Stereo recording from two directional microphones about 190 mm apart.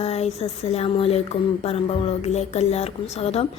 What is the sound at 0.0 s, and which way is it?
Speech, 35° left (ahead or behind).